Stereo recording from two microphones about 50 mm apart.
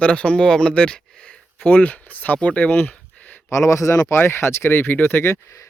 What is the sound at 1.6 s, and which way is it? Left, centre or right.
Speech, left.